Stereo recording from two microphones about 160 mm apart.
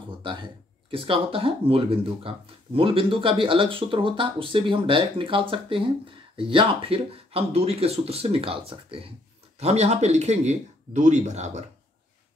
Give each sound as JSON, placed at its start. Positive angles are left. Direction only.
{"t": 0.2, "sound": "speech", "side_deg": -30}